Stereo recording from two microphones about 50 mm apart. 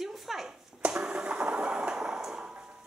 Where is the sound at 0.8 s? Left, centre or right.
Centre.